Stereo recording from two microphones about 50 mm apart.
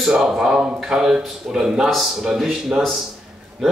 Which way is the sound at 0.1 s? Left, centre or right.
Centre.